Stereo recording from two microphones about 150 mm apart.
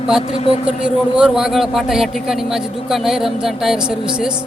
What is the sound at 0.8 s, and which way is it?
Speech, 5° right (ahead or behind).